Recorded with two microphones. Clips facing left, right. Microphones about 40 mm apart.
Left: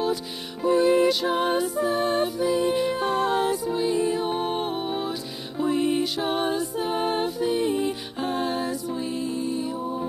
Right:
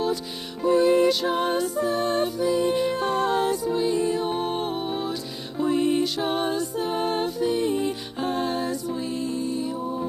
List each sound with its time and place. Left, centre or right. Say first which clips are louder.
0.7 s music: right 1 dB; centre